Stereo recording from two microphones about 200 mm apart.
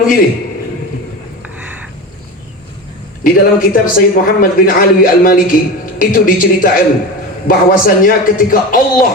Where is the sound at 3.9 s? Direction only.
45° left (ahead or behind).